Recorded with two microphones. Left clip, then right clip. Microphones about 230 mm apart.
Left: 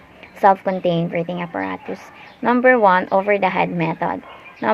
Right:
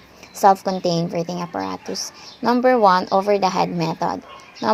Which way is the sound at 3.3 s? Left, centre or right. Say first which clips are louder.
Left 1 dB; right.